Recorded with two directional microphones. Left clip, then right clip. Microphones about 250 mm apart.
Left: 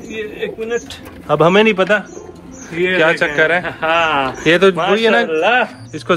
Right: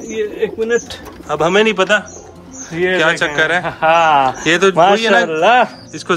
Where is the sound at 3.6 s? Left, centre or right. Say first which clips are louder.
Right 3 dB; right.